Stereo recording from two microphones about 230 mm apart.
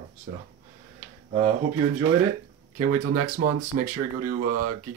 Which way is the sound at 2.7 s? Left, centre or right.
Right.